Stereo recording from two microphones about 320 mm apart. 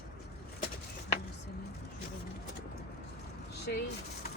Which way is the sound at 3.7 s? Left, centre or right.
Left.